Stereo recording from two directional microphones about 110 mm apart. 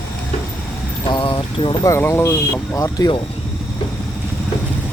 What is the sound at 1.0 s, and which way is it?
Speech, 45° left (ahead or behind).